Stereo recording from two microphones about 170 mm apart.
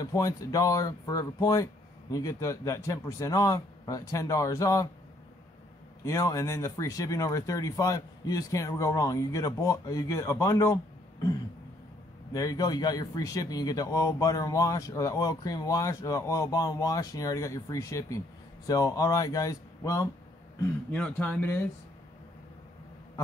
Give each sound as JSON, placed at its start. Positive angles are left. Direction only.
{"t": 0.0, "sound": "a man's voice", "side_deg": 20}
{"t": 6.0, "sound": "a man's voice", "side_deg": 20}
{"t": 12.3, "sound": "a man's voice", "side_deg": 20}
{"t": 20.9, "sound": "speech", "side_deg": 10}